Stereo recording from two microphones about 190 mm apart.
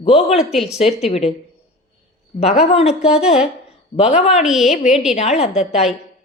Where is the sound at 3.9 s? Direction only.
35° left (ahead or behind).